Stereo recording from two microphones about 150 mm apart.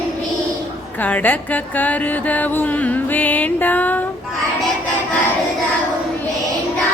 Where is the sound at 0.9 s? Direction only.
10° left (ahead or behind).